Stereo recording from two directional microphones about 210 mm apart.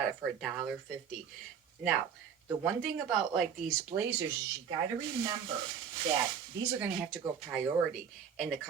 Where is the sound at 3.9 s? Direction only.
30° right (ahead or behind).